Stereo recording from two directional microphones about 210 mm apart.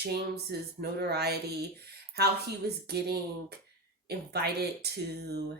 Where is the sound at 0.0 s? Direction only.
50° right (ahead or behind).